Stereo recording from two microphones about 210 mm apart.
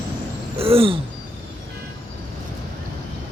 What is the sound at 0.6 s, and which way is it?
Speech, 25° right (ahead or behind).